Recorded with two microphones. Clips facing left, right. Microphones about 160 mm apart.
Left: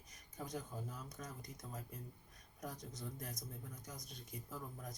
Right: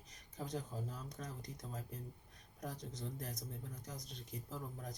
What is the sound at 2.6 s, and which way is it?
Speech, 30° right (ahead or behind).